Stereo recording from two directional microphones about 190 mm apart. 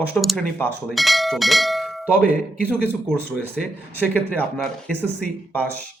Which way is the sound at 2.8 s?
5° left (ahead or behind).